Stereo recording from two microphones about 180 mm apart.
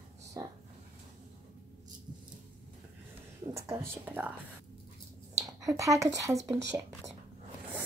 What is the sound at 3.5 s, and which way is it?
Speech, 15° right (ahead or behind).